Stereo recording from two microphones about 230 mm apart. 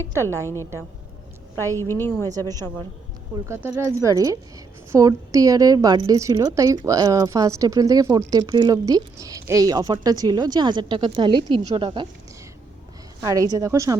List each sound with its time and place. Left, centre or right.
0.0 s a woman's voice: centre
0.3 s a woman's voice: centre
3.3 s a woman's voice: centre
13.2 s a woman's voice: centre